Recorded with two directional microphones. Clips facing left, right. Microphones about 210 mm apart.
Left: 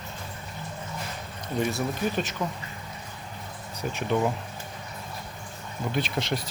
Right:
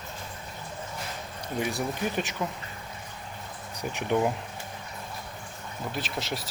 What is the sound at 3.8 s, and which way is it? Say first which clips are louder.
Speech: even; 15° right (ahead or behind).